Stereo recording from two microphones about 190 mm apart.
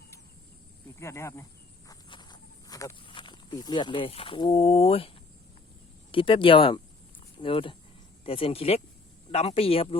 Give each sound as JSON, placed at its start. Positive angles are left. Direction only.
{"t": 0.9, "sound": "speech", "side_deg": 15}
{"t": 1.9, "sound": "walk", "side_deg": 25}
{"t": 6.1, "sound": "speech", "side_deg": 25}